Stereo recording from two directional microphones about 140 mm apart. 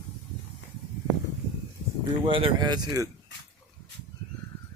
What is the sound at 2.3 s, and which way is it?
Speech, 40° right (ahead or behind).